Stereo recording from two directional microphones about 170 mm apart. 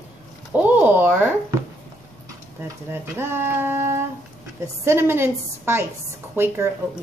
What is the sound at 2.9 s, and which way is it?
Speech, 15° right (ahead or behind).